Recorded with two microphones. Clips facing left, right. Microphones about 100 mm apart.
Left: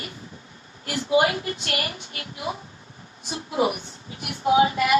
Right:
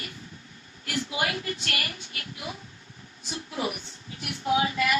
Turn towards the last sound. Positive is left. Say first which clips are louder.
# left 6 dB
turn(degrees=30)  # may be behind; listen again after turning